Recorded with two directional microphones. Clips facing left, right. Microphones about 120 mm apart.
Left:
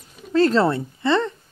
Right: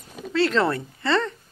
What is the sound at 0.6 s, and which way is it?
Speech, 25° left (ahead or behind).